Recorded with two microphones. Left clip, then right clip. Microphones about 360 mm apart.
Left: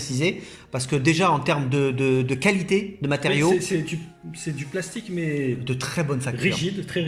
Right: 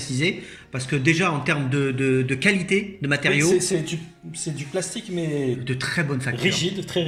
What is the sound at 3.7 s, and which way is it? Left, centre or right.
Speech, right.